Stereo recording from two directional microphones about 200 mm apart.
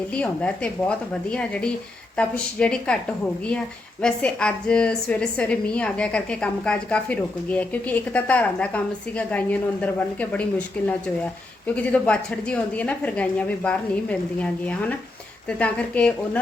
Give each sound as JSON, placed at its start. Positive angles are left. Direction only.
{"t": 0.1, "sound": "a woman's voice", "side_deg": 5}
{"t": 4.0, "sound": "a woman's voice", "side_deg": 5}
{"t": 11.7, "sound": "a woman's voice", "side_deg": 5}